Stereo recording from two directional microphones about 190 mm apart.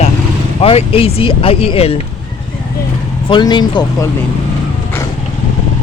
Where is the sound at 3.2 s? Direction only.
25° left (ahead or behind).